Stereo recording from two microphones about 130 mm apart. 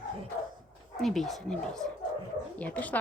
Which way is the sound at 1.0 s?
Centre (ahead or behind).